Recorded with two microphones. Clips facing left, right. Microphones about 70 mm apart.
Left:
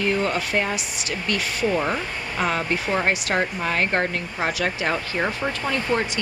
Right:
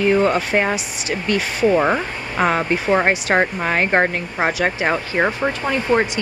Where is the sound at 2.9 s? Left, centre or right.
Right.